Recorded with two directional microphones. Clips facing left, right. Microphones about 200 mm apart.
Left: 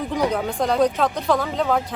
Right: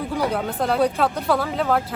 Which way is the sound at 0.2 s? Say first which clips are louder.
Left 2 dB; 5° right (ahead or behind).